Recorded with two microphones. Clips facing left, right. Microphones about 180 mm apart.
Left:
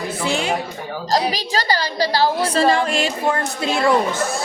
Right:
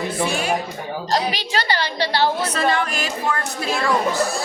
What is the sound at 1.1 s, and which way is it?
A woman's voice, 40° left (ahead or behind).